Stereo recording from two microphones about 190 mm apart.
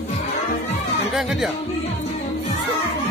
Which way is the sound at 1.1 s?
Centre (ahead or behind).